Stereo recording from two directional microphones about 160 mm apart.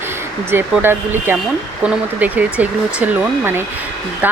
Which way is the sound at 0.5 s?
15° right (ahead or behind).